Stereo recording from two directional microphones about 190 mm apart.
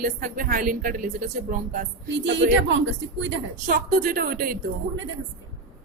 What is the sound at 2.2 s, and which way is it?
Speech, 70° right (ahead or behind).